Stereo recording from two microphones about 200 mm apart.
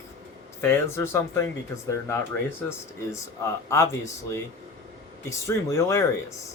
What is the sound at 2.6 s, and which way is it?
Speech, 15° left (ahead or behind).